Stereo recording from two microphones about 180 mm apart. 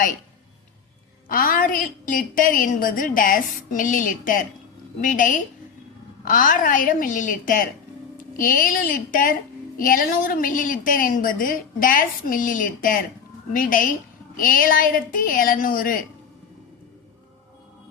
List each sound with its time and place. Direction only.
1.3 s a woman's voice: 50° left (ahead or behind)